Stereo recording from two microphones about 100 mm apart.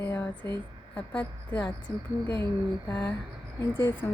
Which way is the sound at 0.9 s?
15° left (ahead or behind).